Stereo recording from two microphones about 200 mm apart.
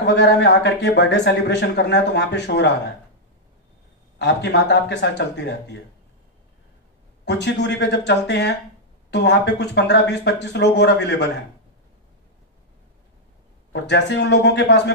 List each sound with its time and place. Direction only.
0.0 s speech: 60° left (ahead or behind)
4.2 s speech: 60° left (ahead or behind)
7.2 s speech: 60° left (ahead or behind)
13.7 s speech: 60° left (ahead or behind)